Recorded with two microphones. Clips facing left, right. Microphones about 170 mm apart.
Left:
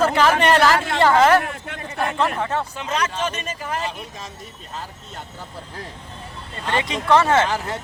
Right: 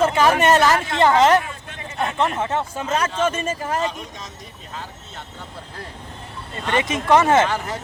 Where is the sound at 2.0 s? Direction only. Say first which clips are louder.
Even; 20° right (ahead or behind).